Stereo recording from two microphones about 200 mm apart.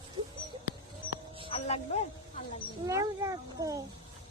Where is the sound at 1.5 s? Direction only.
30° left (ahead or behind).